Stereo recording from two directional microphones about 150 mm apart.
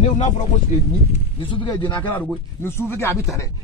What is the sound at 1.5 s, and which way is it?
Speech, 30° left (ahead or behind).